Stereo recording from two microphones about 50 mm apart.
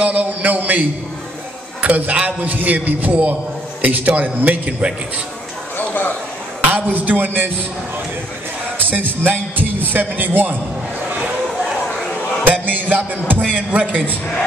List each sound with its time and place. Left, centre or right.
0.0 s a sound: right
1.8 s a man's voice: right
5.8 s a sound: left
6.7 s speech: right
8.7 s a man's voice: right
12.6 s music: right
13.5 s a man's voice: right